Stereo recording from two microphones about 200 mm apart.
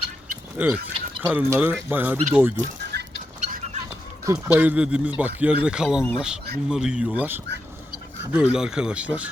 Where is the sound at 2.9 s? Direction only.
55° right (ahead or behind).